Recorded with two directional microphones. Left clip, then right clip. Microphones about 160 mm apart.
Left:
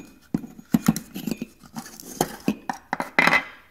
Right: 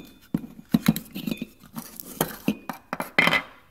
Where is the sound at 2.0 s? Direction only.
15° right (ahead or behind).